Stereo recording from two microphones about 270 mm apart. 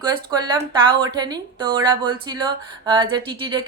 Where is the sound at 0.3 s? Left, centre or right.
Centre.